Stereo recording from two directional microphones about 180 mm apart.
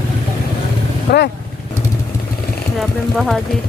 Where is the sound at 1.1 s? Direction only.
65° left (ahead or behind).